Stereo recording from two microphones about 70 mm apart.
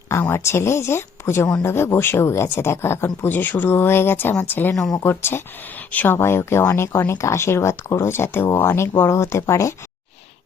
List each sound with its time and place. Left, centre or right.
0.1 s speech: left
5.9 s speech: left
6.1 s speech: left